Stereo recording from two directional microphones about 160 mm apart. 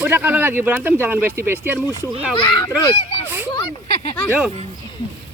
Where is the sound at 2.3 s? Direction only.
30° left (ahead or behind).